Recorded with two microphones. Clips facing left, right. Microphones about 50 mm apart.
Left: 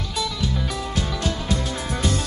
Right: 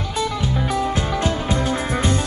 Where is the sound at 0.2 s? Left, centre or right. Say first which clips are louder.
Right 4 dB; right.